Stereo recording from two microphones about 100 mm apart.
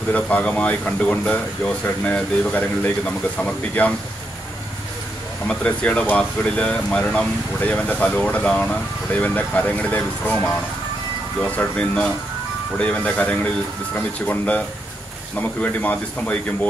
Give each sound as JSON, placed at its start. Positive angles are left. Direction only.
{"t": 0.1, "sound": "speech", "side_deg": 15}
{"t": 5.5, "sound": "speech", "side_deg": 10}
{"t": 11.4, "sound": "speech", "side_deg": 10}